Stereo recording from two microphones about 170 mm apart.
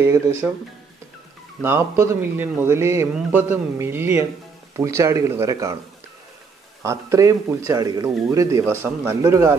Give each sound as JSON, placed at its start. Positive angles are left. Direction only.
{"t": 0.0, "sound": "speech", "side_deg": -15}
{"t": 1.6, "sound": "speech", "side_deg": -15}
{"t": 6.8, "sound": "speech", "side_deg": -15}